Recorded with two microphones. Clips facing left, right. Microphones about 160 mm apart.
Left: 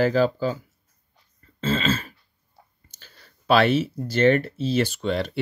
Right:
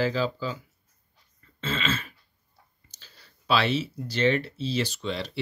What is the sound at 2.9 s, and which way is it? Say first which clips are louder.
Speech: even; 50° left (ahead or behind).